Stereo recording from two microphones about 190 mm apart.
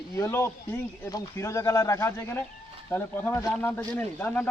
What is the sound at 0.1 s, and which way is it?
A man's voice, 15° left (ahead or behind).